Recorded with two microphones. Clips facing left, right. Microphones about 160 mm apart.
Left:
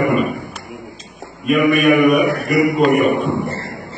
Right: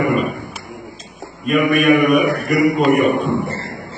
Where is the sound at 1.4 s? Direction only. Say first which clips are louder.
Left 1 dB; centre (ahead or behind).